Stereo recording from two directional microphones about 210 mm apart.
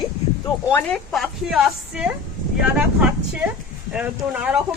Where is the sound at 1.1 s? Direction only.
Centre (ahead or behind).